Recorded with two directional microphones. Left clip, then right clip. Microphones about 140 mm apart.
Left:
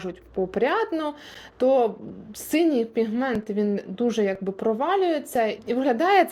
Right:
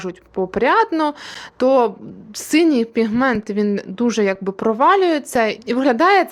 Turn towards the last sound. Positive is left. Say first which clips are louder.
# right 7 dB
turn(degrees=-30)  # may be behind; listen again after turning